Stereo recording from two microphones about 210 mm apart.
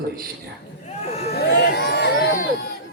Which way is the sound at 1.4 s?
50° left (ahead or behind).